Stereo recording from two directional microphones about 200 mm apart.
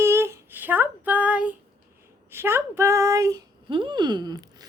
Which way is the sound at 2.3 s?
10° right (ahead or behind).